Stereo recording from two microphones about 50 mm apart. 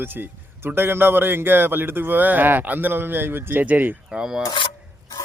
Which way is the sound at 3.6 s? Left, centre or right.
Right.